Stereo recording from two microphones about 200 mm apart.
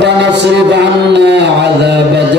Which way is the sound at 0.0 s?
60° right (ahead or behind).